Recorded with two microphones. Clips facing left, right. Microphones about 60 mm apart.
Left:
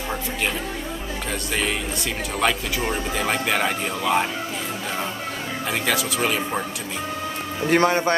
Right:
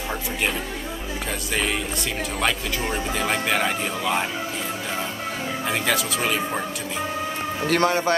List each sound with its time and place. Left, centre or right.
1.5 s speech: centre
5.7 s speech: centre
7.6 s a man's voice: centre